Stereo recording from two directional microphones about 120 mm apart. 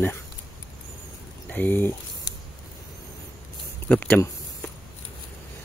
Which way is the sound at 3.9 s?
10° left (ahead or behind).